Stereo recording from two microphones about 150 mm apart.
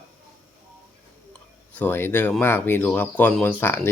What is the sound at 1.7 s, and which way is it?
Speech, 10° left (ahead or behind).